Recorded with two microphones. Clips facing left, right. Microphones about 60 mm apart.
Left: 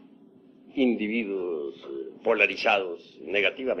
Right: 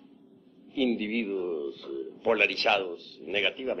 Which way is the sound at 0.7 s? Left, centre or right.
Left.